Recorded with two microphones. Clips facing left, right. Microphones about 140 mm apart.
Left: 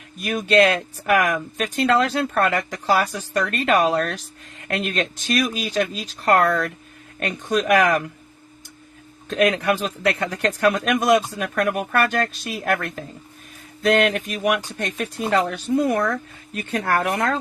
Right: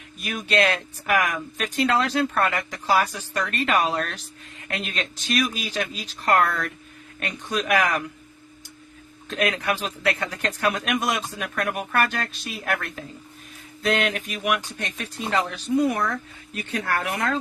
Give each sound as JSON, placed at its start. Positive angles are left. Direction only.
{"t": 0.2, "sound": "speech", "side_deg": 45}
{"t": 9.3, "sound": "speech", "side_deg": 40}